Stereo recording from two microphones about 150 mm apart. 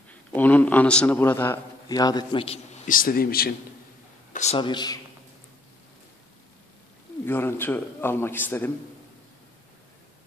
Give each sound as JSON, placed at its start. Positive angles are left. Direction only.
{"t": 0.1, "sound": "a man's voice", "side_deg": 10}
{"t": 1.9, "sound": "a man's voice", "side_deg": 25}
{"t": 2.4, "sound": "a man's voice", "side_deg": 45}
{"t": 2.9, "sound": "a man's voice", "side_deg": 70}
{"t": 4.3, "sound": "a sound", "side_deg": 50}
{"t": 4.6, "sound": "speech", "side_deg": 30}
{"t": 7.2, "sound": "a man's voice", "side_deg": 15}